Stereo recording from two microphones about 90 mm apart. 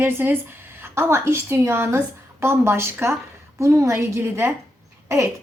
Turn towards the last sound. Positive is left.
turn(degrees=-30)  # may be behind; listen again after turning